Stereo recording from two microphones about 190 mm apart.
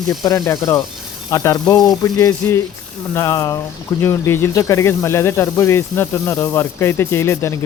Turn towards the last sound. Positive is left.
turn(degrees=15)  # may be behind; listen again after turning